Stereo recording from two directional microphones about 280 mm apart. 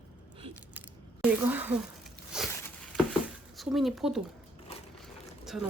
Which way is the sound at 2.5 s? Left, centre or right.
Centre.